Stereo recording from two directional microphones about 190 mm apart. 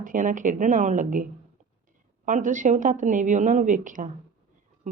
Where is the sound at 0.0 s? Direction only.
45° right (ahead or behind).